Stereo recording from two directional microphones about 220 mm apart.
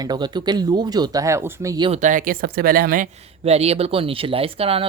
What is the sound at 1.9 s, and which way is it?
Speech, 35° right (ahead or behind).